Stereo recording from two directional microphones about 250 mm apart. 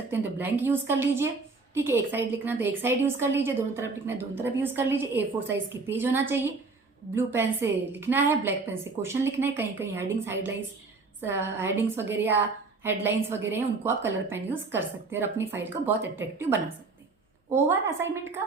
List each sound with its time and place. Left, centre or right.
0.1 s a woman's voice: centre